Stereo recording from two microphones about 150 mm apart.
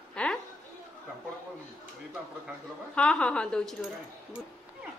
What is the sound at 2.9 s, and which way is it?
Speech, 5° left (ahead or behind).